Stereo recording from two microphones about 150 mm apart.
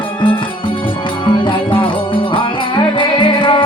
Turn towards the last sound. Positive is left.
turn(degrees=35)  # may be behind; listen again after turning